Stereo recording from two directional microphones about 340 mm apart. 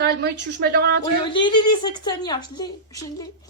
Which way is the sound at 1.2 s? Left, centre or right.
Centre.